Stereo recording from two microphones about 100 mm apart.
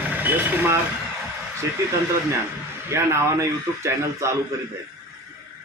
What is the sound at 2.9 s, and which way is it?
Speech, 25° right (ahead or behind).